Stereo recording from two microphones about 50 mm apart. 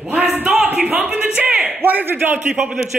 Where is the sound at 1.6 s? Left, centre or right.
Right.